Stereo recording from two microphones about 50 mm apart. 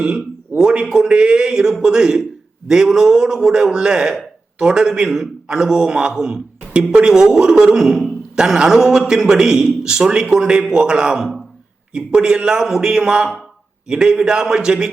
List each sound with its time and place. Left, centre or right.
0.0 s a man's voice: centre